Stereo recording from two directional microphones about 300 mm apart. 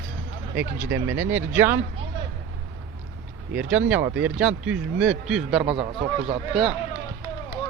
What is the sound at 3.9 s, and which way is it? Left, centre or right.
A man's voice, centre.